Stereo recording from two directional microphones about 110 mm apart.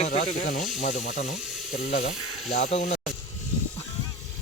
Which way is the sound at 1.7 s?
90° left.